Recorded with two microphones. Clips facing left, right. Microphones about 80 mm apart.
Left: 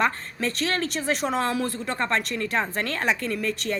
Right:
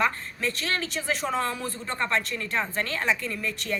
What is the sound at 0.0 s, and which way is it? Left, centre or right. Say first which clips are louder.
A woman's voice: left 2 dB; left.